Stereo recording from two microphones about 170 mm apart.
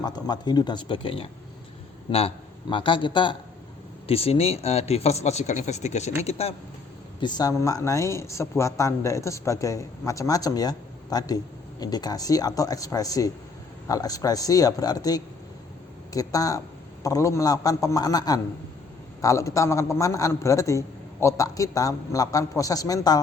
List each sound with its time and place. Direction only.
0.0 s speech: 25° left (ahead or behind)
7.2 s speech: 25° left (ahead or behind)